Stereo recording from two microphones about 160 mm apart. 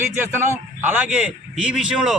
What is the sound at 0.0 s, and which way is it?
A man's voice, 15° right (ahead or behind).